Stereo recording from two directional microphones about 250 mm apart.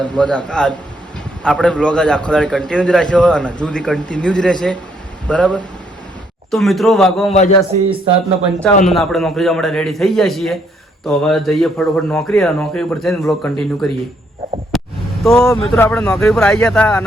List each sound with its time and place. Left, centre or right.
0.0 s a man's voice: centre
7.3 s a man's voice: left
8.6 s a man's voice: centre
14.7 s a sound: centre
15.2 s a man's voice: centre